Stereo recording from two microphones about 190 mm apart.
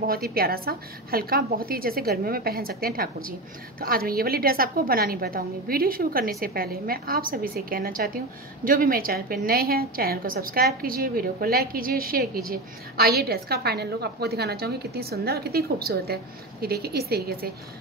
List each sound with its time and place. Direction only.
0.0 s a woman's voice: 50° right (ahead or behind)